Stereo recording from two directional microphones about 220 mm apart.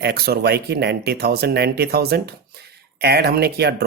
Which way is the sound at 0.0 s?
45° right (ahead or behind).